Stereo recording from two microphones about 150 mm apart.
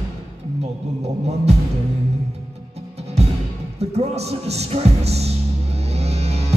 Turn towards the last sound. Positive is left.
turn(degrees=-45)  # may be behind; listen again after turning